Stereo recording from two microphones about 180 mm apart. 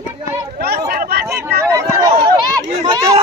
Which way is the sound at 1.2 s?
15° right (ahead or behind).